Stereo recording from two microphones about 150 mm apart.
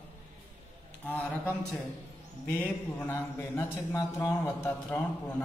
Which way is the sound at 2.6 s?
15° left (ahead or behind).